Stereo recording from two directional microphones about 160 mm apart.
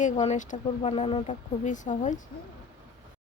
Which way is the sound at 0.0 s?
50° left (ahead or behind).